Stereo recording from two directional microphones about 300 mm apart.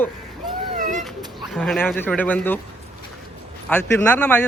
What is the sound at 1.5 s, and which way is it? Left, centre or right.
Speech, centre.